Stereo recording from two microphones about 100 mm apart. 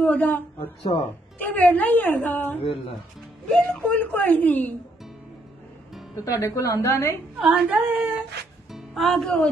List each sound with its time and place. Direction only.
0.0 s a woman's voice: 20° left (ahead or behind)
1.4 s a woman's voice: 15° left (ahead or behind)
3.4 s speech: 5° left (ahead or behind)
3.8 s a woman's voice: 15° left (ahead or behind)
6.1 s a woman's voice: 35° left (ahead or behind)
7.3 s speech: 5° right (ahead or behind)
8.7 s speech: centre (ahead or behind)